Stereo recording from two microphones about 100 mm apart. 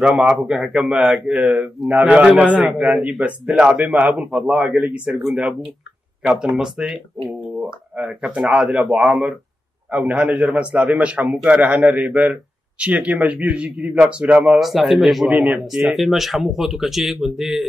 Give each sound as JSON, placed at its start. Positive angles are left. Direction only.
{"t": 0.0, "sound": "speech", "side_deg": -5}
{"t": 1.4, "sound": "a man's voice", "side_deg": -15}
{"t": 14.6, "sound": "speech", "side_deg": 0}